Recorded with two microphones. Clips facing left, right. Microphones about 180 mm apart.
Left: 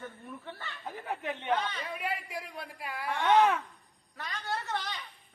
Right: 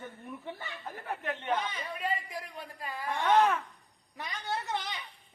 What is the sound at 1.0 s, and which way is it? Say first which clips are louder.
Speech: even; 15° left (ahead or behind).